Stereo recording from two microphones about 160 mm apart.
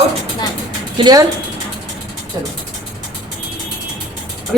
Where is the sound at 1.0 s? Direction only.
25° right (ahead or behind).